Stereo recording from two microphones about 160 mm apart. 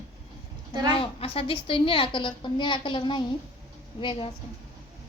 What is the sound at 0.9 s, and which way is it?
A woman's voice, 35° left (ahead or behind).